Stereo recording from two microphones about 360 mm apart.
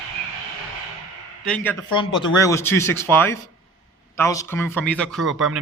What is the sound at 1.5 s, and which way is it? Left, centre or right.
A man's voice, centre.